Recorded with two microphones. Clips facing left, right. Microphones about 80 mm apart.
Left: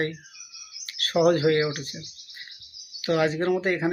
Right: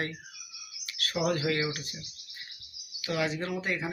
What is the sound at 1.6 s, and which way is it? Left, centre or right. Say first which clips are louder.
Speech: left 5 dB; left.